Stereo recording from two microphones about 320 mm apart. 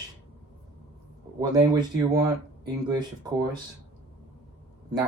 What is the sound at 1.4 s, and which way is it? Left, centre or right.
Speech, centre.